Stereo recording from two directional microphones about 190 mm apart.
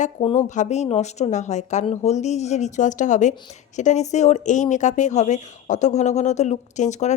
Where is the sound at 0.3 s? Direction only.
40° left (ahead or behind).